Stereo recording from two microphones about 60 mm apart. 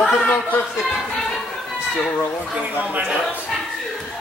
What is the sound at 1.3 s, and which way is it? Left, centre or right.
Chatter, centre.